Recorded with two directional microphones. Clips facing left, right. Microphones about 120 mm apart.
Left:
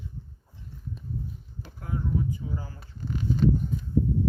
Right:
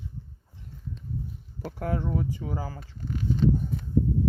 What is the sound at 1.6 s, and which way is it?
Speech, 75° right (ahead or behind).